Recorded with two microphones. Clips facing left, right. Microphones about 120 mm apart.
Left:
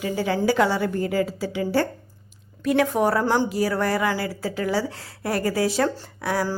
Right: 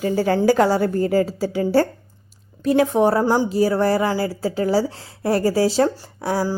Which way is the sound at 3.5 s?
30° right (ahead or behind).